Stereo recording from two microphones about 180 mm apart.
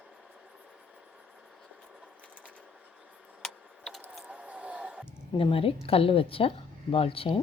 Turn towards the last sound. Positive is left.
turn(degrees=30)  # may be behind; listen again after turning